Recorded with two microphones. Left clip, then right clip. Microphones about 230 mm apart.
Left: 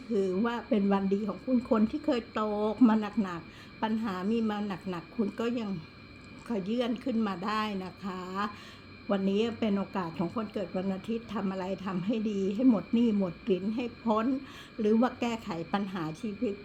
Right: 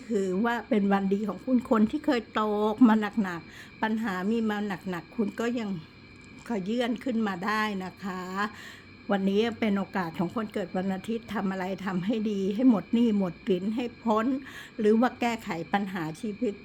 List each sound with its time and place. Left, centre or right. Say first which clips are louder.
0.1 s a woman's voice: right 2 dB; right